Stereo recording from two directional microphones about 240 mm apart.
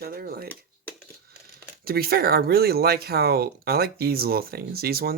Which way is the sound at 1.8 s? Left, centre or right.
Right.